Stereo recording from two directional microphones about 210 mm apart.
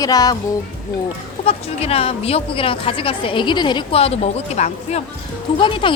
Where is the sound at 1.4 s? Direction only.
30° left (ahead or behind).